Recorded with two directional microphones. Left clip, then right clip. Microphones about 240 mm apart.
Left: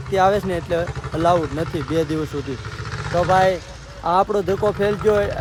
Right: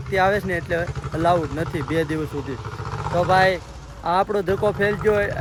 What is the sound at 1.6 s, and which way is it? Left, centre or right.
Speech, centre.